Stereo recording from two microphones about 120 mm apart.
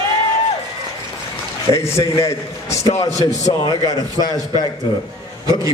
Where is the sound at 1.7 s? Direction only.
25° left (ahead or behind).